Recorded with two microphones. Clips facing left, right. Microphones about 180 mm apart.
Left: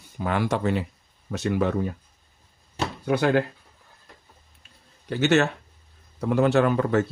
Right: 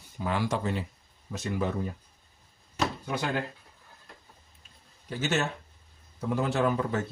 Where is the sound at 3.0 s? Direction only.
65° left (ahead or behind).